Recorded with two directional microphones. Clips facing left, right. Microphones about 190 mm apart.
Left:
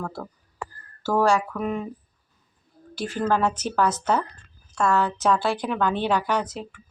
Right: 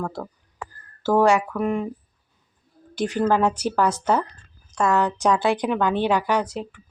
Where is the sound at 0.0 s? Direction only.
15° right (ahead or behind).